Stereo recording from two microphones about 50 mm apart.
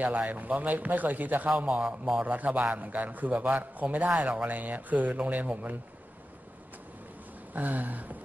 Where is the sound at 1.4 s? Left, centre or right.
Right.